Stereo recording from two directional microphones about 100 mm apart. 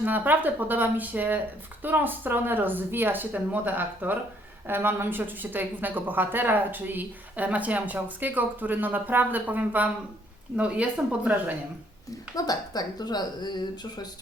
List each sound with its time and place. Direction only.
0.0 s a woman's voice: 20° right (ahead or behind)
12.5 s speech: 40° left (ahead or behind)